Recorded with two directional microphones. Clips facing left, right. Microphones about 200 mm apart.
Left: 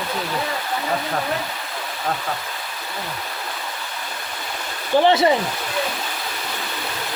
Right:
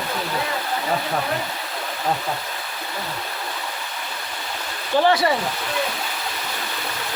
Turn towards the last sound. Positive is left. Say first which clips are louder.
# left 2 dB
turn(degrees=20)  # may be behind; listen again after turning